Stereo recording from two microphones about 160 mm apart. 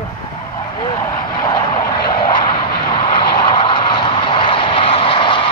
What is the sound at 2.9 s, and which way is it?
Vehicle, 30° left (ahead or behind).